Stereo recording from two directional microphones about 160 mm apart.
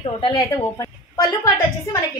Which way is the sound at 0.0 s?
35° left (ahead or behind).